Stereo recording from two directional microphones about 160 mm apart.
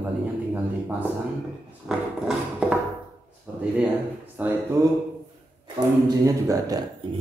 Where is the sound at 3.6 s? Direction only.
10° right (ahead or behind).